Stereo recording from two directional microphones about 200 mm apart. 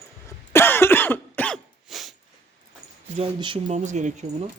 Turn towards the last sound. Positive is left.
turn(degrees=-35)  # may be behind; listen again after turning